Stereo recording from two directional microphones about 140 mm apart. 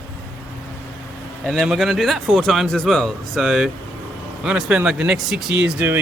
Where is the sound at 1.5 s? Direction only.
Centre (ahead or behind).